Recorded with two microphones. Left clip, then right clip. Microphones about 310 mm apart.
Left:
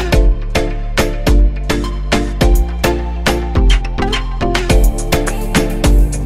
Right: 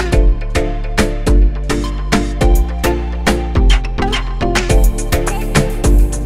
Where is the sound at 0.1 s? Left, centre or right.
Centre.